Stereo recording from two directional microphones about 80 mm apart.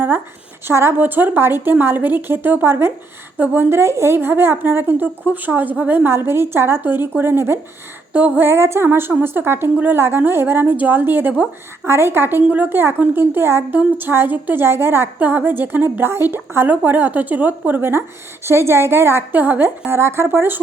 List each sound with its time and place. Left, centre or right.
0.7 s a woman's voice: right